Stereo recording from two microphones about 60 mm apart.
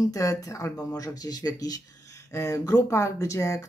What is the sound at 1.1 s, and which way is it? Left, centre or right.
Speech, left.